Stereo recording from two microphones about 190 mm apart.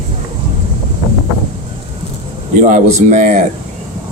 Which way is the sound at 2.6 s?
40° right (ahead or behind).